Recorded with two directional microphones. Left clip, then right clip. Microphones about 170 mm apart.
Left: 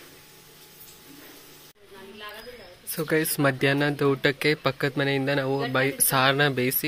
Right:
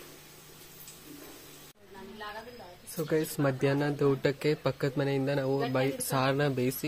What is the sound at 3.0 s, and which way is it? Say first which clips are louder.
Speech: left 6 dB; 10° left (ahead or behind).